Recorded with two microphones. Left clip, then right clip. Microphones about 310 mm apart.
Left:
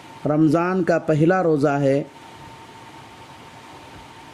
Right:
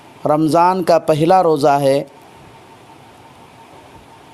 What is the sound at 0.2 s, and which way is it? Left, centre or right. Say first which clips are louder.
Speech: right 5 dB; right.